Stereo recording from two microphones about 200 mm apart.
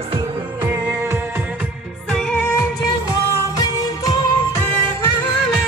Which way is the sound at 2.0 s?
5° left (ahead or behind).